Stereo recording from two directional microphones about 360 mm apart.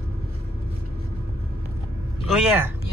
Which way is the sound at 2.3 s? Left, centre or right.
Centre.